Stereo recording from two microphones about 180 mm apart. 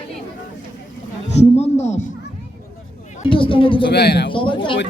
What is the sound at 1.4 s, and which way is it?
Speech, 35° left (ahead or behind).